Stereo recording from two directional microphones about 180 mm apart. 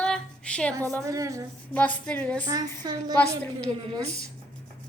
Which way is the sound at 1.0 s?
15° right (ahead or behind).